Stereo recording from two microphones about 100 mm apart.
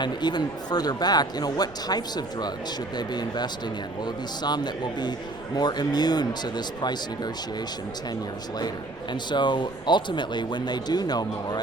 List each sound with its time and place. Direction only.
0.0 s a man's voice: 45° left (ahead or behind)
9.3 s a man's voice: 50° left (ahead or behind)